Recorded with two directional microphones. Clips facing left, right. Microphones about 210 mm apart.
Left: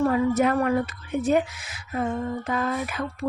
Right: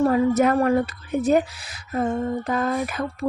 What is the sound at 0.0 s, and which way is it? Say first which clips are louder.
A woman's voice: right 3 dB; 40° right (ahead or behind).